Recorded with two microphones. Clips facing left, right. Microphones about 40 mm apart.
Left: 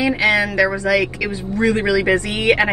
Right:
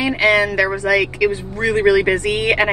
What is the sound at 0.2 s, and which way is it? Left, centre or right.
A man's voice, right.